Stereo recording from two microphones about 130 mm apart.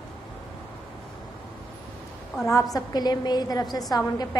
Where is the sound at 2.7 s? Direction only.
30° left (ahead or behind).